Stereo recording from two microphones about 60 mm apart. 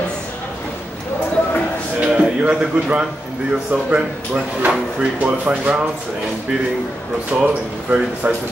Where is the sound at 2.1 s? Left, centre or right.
Centre.